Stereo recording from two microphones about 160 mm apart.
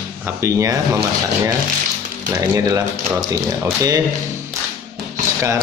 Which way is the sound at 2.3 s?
20° right (ahead or behind).